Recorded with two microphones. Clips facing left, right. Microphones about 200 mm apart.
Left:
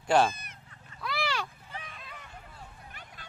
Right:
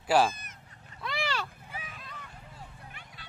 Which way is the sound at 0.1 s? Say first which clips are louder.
Even; 5° right (ahead or behind).